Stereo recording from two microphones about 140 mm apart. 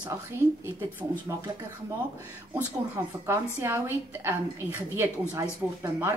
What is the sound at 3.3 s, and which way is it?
A woman's voice, 20° right (ahead or behind).